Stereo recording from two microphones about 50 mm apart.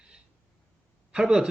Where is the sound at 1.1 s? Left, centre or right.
Centre.